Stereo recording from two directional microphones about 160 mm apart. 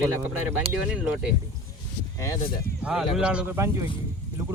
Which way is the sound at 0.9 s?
10° right (ahead or behind).